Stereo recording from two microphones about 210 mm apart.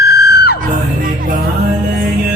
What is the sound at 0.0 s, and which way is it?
Music, 50° left (ahead or behind).